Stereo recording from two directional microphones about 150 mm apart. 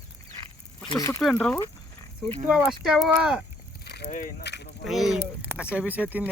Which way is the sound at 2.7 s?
5° right (ahead or behind).